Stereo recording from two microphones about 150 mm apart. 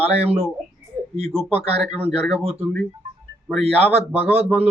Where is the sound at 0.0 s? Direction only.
40° right (ahead or behind).